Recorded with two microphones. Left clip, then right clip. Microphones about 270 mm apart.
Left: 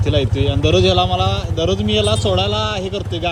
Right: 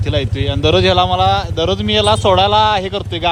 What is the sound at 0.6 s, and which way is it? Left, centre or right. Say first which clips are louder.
Speech: right 3 dB; centre.